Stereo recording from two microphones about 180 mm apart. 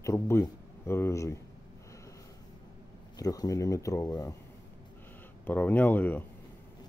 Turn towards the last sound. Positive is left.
turn(degrees=10)  # may be behind; listen again after turning